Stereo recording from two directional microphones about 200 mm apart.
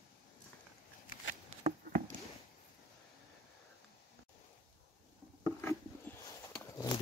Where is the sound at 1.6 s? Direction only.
40° right (ahead or behind).